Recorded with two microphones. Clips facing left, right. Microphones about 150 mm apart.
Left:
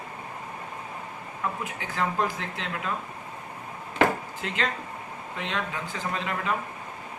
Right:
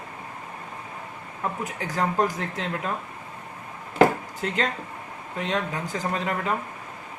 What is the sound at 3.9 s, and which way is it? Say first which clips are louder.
Chop: right 5 dB; 40° right (ahead or behind).